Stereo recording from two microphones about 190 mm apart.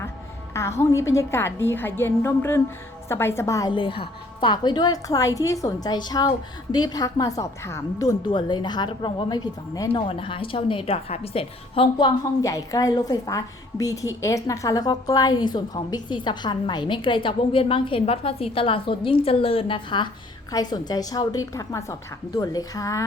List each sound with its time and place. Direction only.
0.8 s a woman's voice: 15° left (ahead or behind)